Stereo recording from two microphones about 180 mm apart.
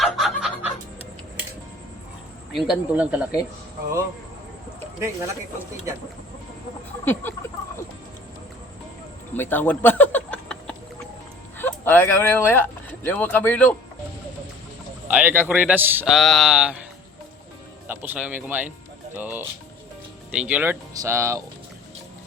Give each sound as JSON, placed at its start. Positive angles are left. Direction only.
{"t": 0.0, "sound": "chicken", "side_deg": 0}
{"t": 2.5, "sound": "a man's voice", "side_deg": 0}
{"t": 7.0, "sound": "a sound", "side_deg": 10}
{"t": 9.3, "sound": "speech", "side_deg": 10}
{"t": 15.0, "sound": "a man's voice", "side_deg": -10}
{"t": 16.1, "sound": "a sound", "side_deg": 0}
{"t": 17.8, "sound": "a man's voice", "side_deg": -10}